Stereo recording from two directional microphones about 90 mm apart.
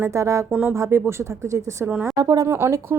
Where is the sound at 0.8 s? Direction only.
30° right (ahead or behind).